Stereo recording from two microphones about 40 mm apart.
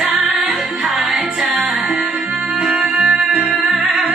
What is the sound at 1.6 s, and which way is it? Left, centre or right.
Music, centre.